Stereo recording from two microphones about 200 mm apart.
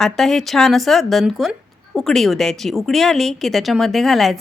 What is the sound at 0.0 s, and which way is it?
Speech, centre (ahead or behind).